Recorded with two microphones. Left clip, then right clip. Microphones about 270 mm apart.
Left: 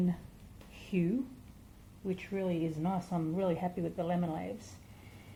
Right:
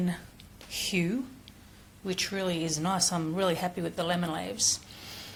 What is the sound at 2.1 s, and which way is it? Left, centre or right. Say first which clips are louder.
A woman's voice: right 5 dB; centre.